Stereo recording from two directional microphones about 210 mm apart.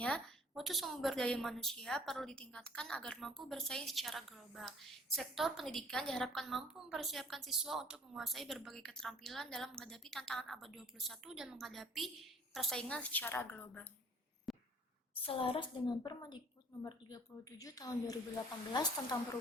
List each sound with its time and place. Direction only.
0.0 s a woman's voice: centre (ahead or behind)
14.5 s a sound: centre (ahead or behind)
15.2 s a woman's voice: 25° left (ahead or behind)
17.6 s a woman's voice: 15° left (ahead or behind)